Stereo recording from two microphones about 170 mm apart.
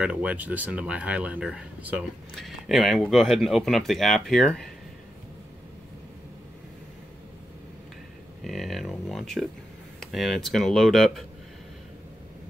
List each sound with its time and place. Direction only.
0.0 s speech: 5° right (ahead or behind)
8.5 s speech: centre (ahead or behind)